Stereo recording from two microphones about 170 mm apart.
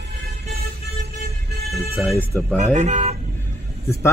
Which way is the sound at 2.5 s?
45° right (ahead or behind).